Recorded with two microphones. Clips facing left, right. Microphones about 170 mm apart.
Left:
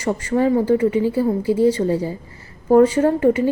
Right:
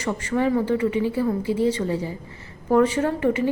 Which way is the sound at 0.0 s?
30° left (ahead or behind).